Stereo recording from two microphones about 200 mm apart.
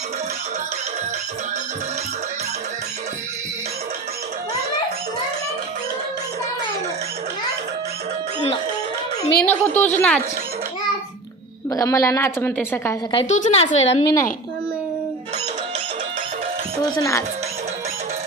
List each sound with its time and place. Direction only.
9.4 s a woman's voice: 10° left (ahead or behind)
11.7 s a woman's voice: 15° left (ahead or behind)
13.1 s a woman's voice: 30° left (ahead or behind)
16.9 s a woman's voice: 15° left (ahead or behind)